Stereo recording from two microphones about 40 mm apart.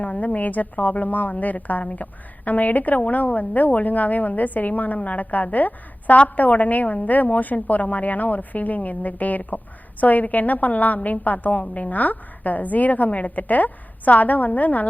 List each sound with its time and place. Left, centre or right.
0.0 s a woman's voice: left